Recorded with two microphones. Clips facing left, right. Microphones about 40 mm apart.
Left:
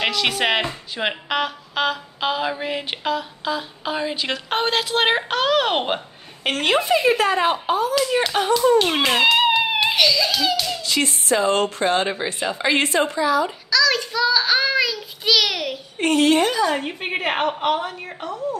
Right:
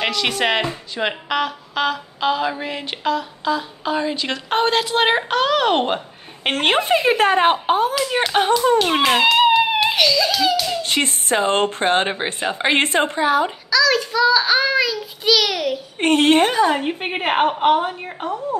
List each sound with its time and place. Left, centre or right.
0.0 s speech: centre
6.4 s speech: right
8.7 s a child's voice: centre
10.8 s speech: right
13.7 s speech: centre
16.0 s speech: right
16.7 s a woman's voice: centre